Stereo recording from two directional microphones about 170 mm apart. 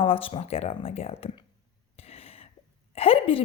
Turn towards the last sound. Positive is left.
turn(degrees=35)  # may be behind; listen again after turning